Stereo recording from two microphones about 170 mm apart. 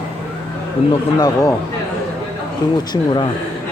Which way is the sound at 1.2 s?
20° left (ahead or behind).